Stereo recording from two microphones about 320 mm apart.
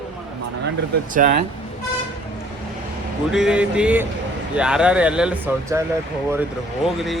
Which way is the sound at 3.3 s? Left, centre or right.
Centre.